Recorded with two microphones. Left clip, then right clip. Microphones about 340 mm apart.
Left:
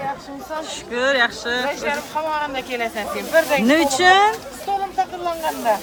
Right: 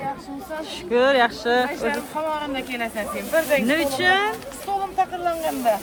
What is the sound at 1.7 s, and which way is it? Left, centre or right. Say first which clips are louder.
Speech: left 2 dB; centre.